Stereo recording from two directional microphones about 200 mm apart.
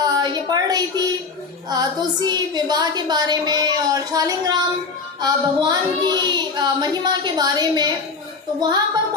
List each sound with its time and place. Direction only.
0.0 s a woman's voice: 20° right (ahead or behind)